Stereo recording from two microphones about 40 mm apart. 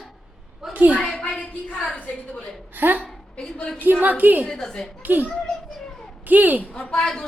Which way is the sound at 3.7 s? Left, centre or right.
Right.